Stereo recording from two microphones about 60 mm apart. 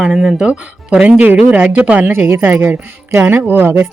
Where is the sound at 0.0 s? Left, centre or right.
Centre; by 2.1 s right.